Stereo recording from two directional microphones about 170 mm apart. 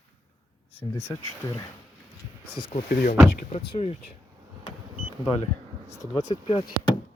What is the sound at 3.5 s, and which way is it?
Speech, 35° left (ahead or behind).